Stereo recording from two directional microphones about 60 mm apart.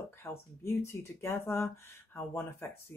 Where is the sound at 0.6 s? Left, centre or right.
Left.